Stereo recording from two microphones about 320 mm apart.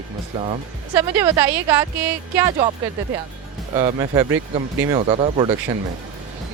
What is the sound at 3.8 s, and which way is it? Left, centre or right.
Speech, centre.